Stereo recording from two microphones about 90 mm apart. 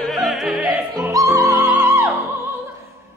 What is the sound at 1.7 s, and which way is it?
Music, 25° right (ahead or behind).